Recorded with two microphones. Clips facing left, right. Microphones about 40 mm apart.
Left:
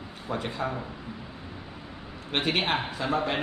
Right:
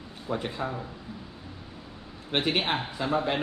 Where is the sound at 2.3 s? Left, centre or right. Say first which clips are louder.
Even; centre.